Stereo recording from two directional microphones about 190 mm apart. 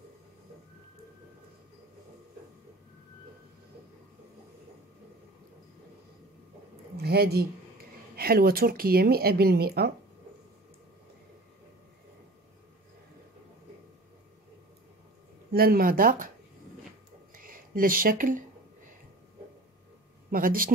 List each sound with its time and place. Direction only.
7.0 s speech: 55° right (ahead or behind)
15.5 s speech: 50° right (ahead or behind)
17.4 s speech: 50° right (ahead or behind)
20.2 s speech: 50° right (ahead or behind)